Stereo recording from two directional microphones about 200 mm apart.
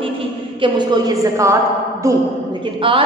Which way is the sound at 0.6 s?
20° right (ahead or behind).